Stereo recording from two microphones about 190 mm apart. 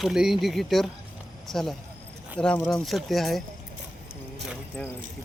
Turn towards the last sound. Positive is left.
turn(degrees=0)  # may be behind; listen again after turning